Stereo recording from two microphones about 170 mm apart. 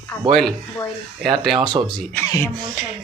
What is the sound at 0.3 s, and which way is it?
Speech, centre (ahead or behind).